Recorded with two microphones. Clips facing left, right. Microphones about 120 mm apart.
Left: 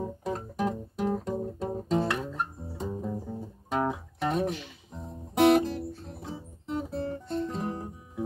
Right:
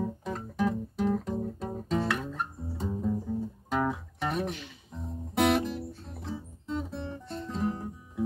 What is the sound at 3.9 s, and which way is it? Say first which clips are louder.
Music: left 2 dB; 25° left (ahead or behind).